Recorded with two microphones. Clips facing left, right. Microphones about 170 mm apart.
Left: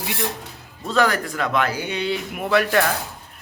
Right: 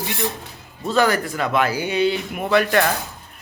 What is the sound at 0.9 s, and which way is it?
Speech, centre (ahead or behind).